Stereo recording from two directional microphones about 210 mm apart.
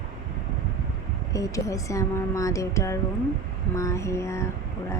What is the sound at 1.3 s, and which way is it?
Speech, 15° left (ahead or behind).